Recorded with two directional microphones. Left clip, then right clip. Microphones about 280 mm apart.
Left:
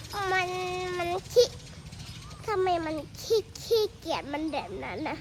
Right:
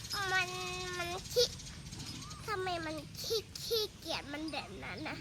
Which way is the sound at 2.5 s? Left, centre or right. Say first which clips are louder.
Left 10 dB; left.